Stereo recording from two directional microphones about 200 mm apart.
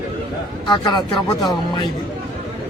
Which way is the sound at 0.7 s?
20° left (ahead or behind).